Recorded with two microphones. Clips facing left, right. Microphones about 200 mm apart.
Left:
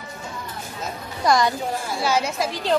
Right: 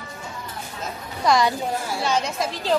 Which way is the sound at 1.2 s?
Centre (ahead or behind).